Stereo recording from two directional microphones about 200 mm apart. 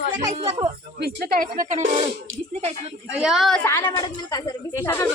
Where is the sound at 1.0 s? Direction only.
50° right (ahead or behind).